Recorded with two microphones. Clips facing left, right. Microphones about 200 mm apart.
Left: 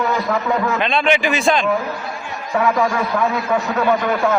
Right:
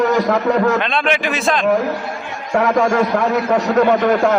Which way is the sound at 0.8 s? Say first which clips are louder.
Left 1 dB; centre (ahead or behind).